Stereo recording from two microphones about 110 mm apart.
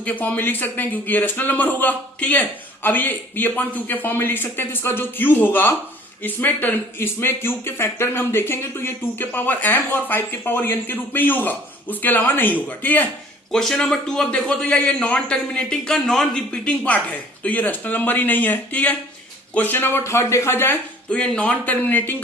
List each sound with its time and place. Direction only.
0.0 s a man's voice: 15° left (ahead or behind)
13.5 s a man's voice: 5° left (ahead or behind)